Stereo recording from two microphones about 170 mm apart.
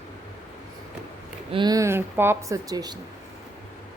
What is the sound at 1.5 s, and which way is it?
Speech, 25° right (ahead or behind).